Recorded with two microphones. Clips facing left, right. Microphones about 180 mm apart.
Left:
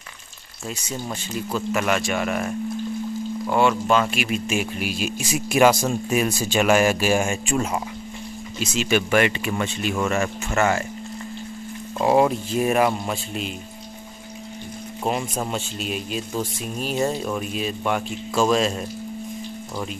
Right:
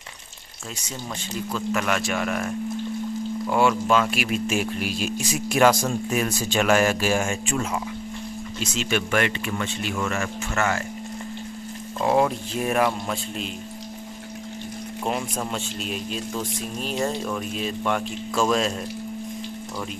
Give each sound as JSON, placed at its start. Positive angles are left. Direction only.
{"t": 1.5, "sound": "speech", "side_deg": 10}
{"t": 3.4, "sound": "speech", "side_deg": 0}
{"t": 7.5, "sound": "speech", "side_deg": 30}
{"t": 8.5, "sound": "speech", "side_deg": 10}
{"t": 12.0, "sound": "speech", "side_deg": 10}
{"t": 15.5, "sound": "speech", "side_deg": 5}